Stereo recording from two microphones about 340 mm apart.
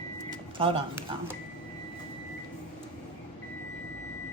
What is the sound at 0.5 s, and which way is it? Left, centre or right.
Speech, centre.